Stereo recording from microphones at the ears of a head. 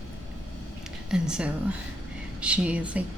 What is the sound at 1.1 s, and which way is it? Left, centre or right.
Speech, centre.